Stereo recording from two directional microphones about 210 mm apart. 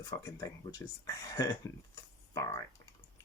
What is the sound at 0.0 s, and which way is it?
Speech, 15° left (ahead or behind).